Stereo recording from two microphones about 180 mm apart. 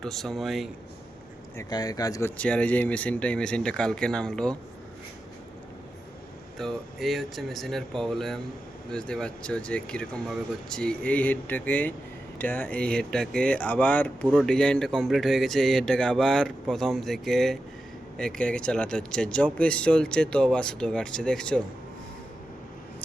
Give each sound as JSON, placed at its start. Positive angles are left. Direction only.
{"t": 0.0, "sound": "speech", "side_deg": 0}
{"t": 1.5, "sound": "speech", "side_deg": 20}
{"t": 2.4, "sound": "speech", "side_deg": 5}
{"t": 6.6, "sound": "speech", "side_deg": 0}